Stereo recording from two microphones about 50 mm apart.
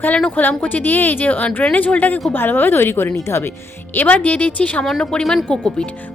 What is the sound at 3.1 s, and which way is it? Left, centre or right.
Speech, left.